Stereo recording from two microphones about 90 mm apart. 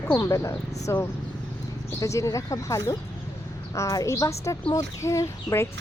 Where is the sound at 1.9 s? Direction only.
35° left (ahead or behind).